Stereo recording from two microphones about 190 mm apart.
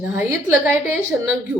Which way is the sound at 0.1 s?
10° right (ahead or behind).